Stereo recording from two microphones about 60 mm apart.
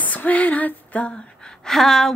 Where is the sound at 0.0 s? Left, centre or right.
Left.